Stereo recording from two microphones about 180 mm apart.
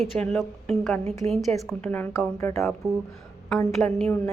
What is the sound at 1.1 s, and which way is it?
Speech, 35° right (ahead or behind).